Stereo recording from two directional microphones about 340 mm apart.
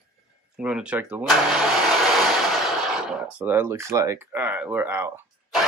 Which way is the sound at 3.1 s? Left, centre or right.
Centre.